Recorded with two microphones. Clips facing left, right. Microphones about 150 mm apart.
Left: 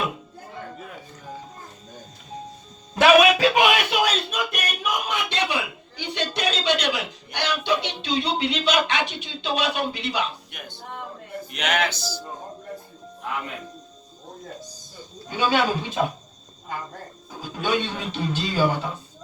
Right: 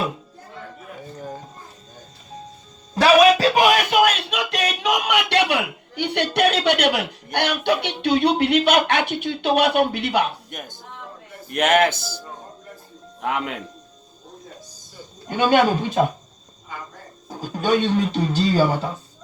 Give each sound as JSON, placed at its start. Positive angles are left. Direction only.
{"t": 2.9, "sound": "speech", "side_deg": -35}
{"t": 13.2, "sound": "speech", "side_deg": -80}
{"t": 15.3, "sound": "speech", "side_deg": -50}
{"t": 17.2, "sound": "speech", "side_deg": -40}